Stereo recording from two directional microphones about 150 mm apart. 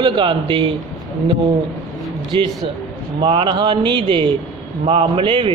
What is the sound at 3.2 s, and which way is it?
A man's voice, 30° right (ahead or behind).